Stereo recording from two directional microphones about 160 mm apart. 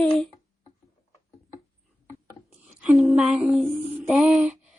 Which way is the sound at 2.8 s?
5° right (ahead or behind).